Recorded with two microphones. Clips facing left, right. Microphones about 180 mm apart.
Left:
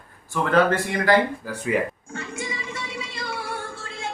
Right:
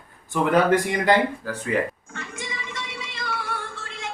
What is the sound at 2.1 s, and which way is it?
Music, 30° left (ahead or behind).